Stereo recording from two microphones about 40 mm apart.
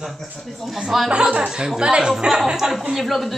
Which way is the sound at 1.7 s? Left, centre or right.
Right.